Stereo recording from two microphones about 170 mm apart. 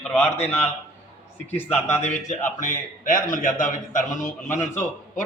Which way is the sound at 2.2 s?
50° left (ahead or behind).